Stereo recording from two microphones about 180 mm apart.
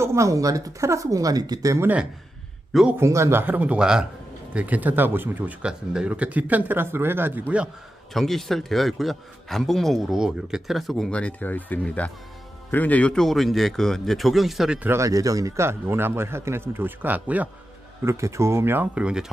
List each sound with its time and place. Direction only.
0.0 s a man's voice: 15° right (ahead or behind)